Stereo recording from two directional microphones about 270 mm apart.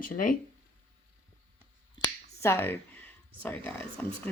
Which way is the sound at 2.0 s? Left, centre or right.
Centre.